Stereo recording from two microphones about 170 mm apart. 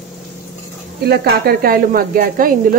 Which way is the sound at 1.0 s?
65° right (ahead or behind).